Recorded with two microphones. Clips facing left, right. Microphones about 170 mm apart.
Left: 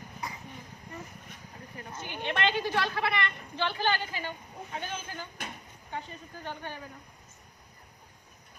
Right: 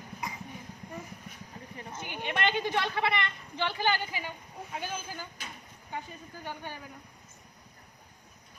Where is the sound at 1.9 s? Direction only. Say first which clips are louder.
Left 1 dB; 15° right (ahead or behind).